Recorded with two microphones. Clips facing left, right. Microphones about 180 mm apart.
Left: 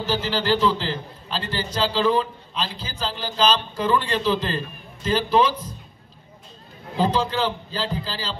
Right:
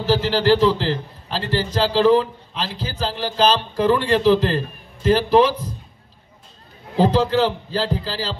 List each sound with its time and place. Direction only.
0.0 s a man's voice: 75° right (ahead or behind)
7.0 s a man's voice: 75° right (ahead or behind)